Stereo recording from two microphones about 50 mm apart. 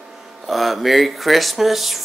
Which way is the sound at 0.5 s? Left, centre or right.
Centre.